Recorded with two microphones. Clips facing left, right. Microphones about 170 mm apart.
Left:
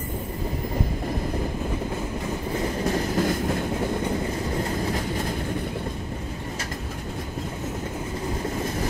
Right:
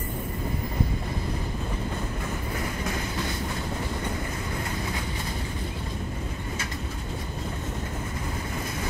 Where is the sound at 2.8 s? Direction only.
40° left (ahead or behind).